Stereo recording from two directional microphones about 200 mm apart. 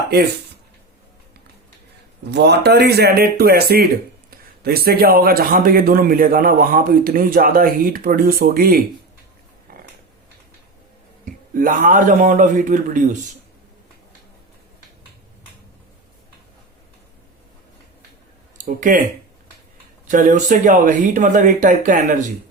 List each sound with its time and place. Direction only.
0.1 s speech: 55° right (ahead or behind)
2.3 s a man's voice: 55° right (ahead or behind)
11.5 s speech: 45° right (ahead or behind)
18.5 s speech: 40° right (ahead or behind)
20.1 s speech: 40° right (ahead or behind)